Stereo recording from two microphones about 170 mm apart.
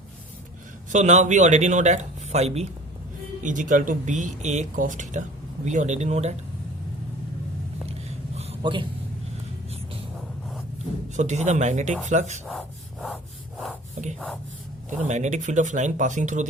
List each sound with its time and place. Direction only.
0.9 s speech: 45° right (ahead or behind)
8.4 s a sound: 35° right (ahead or behind)
11.2 s speech: 40° right (ahead or behind)
12.5 s rub: 5° left (ahead or behind)
14.8 s speech: 45° right (ahead or behind)